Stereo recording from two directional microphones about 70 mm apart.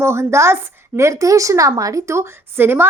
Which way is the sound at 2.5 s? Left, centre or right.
Right.